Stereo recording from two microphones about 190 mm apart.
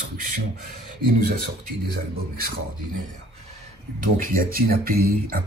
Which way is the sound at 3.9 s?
50° right (ahead or behind).